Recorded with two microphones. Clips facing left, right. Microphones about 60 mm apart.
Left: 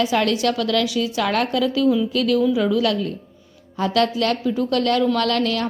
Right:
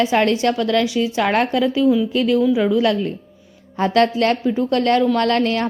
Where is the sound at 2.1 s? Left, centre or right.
Right.